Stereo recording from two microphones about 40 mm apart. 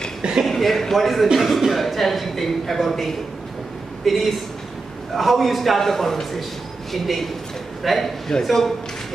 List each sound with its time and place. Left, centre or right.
0.2 s a sound: centre
0.5 s a man's voice: centre
8.3 s a man's voice: centre